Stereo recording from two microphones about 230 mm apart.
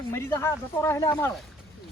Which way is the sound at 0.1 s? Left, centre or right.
Centre.